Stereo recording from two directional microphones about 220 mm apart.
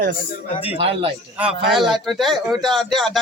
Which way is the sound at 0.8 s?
25° right (ahead or behind).